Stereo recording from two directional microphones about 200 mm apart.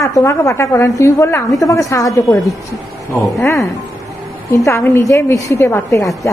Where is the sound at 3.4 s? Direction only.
15° left (ahead or behind).